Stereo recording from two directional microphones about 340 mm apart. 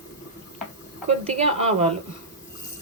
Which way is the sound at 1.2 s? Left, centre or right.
Centre.